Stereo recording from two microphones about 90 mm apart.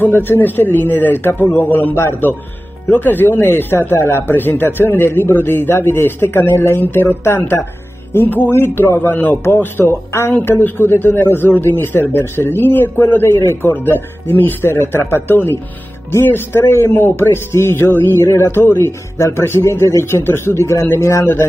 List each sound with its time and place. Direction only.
0.0 s a man's voice: 25° left (ahead or behind)